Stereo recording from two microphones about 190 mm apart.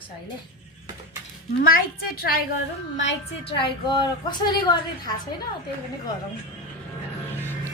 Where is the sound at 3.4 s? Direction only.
25° left (ahead or behind).